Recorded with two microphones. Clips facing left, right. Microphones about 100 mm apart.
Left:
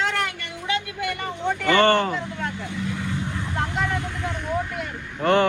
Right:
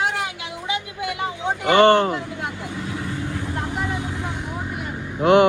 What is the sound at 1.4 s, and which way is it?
Speech, 20° right (ahead or behind).